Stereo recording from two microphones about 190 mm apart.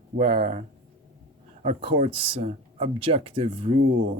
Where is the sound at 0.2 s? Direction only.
30° right (ahead or behind).